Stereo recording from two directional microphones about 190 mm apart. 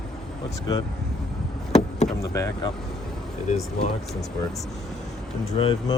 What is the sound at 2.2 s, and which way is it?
Speech, 15° left (ahead or behind).